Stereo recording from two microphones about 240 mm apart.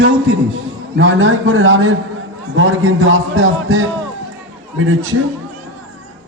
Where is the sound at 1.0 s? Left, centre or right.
Right.